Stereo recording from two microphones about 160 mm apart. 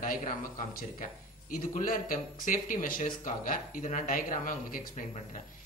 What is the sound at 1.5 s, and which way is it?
Speech, 60° left (ahead or behind).